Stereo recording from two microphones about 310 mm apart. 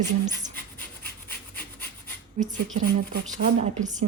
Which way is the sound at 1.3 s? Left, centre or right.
Left.